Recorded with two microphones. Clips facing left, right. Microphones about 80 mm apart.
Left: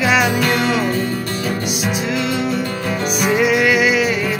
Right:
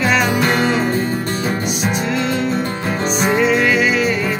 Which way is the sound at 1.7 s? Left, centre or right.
Centre.